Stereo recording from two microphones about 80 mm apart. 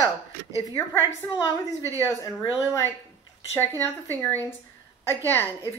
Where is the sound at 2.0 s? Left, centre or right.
Left.